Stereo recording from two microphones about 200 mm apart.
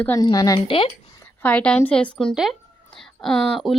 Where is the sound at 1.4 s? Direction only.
5° left (ahead or behind).